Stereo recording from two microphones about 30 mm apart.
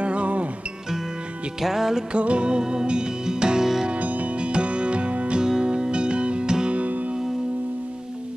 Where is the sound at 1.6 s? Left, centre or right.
Centre.